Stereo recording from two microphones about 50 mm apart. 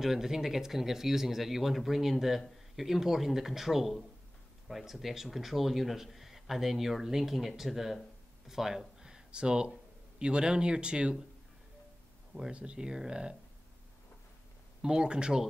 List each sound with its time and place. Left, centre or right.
0.0 s speech: centre
12.5 s speech: centre
14.8 s speech: centre